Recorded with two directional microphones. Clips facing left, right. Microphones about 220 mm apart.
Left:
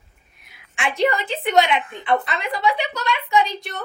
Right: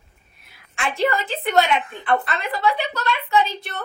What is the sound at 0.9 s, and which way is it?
Speech, 15° left (ahead or behind).